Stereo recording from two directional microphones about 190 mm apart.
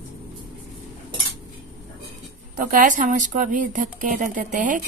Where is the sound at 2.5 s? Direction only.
45° right (ahead or behind).